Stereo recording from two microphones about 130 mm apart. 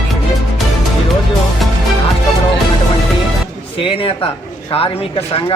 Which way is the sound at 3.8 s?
40° left (ahead or behind).